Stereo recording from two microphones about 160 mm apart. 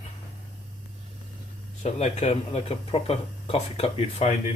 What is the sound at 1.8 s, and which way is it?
Speech, 40° left (ahead or behind).